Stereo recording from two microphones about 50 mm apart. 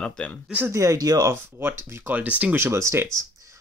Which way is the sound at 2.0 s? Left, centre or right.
Right.